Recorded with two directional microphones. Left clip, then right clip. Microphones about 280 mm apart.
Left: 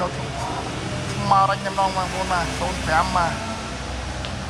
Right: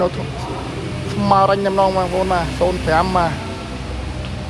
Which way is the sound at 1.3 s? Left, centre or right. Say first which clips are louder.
Right 4 dB; centre.